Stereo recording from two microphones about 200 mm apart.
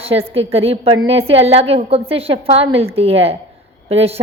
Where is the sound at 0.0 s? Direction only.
30° right (ahead or behind).